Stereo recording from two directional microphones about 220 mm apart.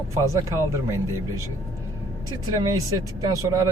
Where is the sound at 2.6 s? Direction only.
15° right (ahead or behind).